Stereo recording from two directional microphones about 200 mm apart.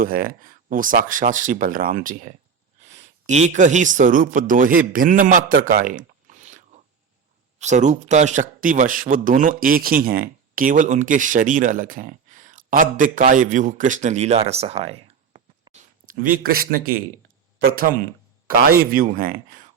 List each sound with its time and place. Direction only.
0.0 s a man's voice: 45° right (ahead or behind)
7.6 s speech: 35° right (ahead or behind)
16.0 s speech: 45° right (ahead or behind)